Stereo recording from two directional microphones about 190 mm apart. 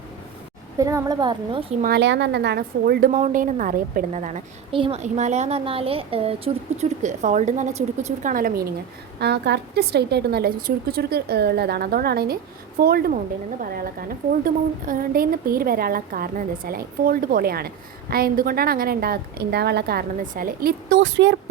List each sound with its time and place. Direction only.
0.8 s a woman's voice: 15° right (ahead or behind)
1.8 s a woman's voice: 60° right (ahead or behind)
3.1 s a woman's voice: 40° right (ahead or behind)
9.2 s a woman's voice: 60° right (ahead or behind)